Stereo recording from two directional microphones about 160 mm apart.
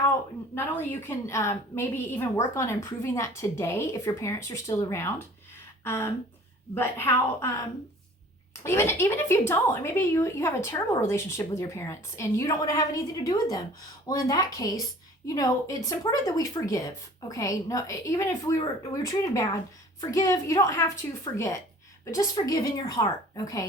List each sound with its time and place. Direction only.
0.5 s a woman's voice: 15° left (ahead or behind)
8.6 s a woman's voice: 15° left (ahead or behind)